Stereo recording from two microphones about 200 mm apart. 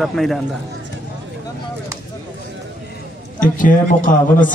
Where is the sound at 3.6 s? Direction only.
40° left (ahead or behind).